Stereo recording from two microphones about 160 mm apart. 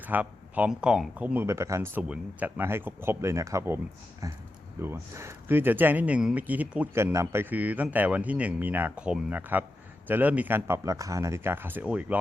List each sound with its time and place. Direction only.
0.0 s speech: 10° right (ahead or behind)